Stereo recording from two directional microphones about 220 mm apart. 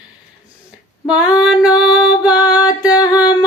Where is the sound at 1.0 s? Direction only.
5° right (ahead or behind).